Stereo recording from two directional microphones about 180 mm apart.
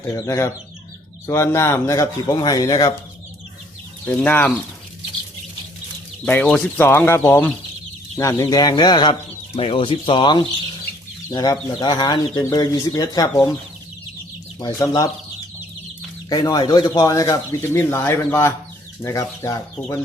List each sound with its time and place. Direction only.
0.1 s speech: 15° left (ahead or behind)
4.0 s speech: 10° left (ahead or behind)
6.2 s speech: 5° left (ahead or behind)
14.6 s speech: 20° left (ahead or behind)
16.3 s speech: 20° left (ahead or behind)